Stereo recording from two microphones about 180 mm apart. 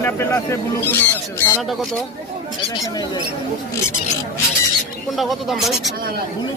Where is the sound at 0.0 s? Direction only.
15° left (ahead or behind).